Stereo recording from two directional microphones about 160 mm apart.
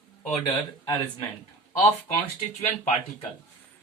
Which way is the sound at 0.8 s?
30° left (ahead or behind).